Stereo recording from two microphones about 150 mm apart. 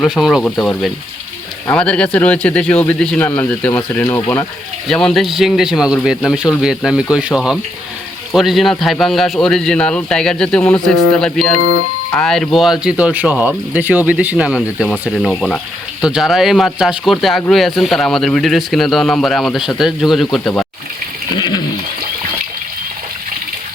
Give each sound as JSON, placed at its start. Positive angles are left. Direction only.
{"t": 0.0, "sound": "speech", "side_deg": 0}
{"t": 0.5, "sound": "a man's voice", "side_deg": 15}
{"t": 4.9, "sound": "speech", "side_deg": 5}
{"t": 21.3, "sound": "a sound", "side_deg": 30}